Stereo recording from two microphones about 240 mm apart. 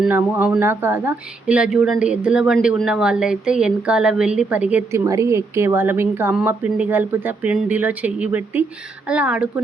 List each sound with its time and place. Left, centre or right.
0.0 s speech: centre